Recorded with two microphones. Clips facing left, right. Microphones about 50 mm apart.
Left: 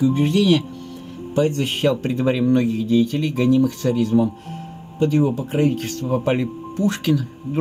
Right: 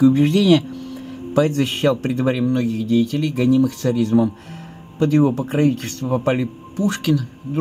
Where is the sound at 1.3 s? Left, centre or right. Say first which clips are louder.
Right 2 dB; right.